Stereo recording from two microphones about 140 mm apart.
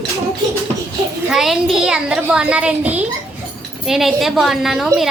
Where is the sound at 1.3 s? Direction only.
Centre (ahead or behind).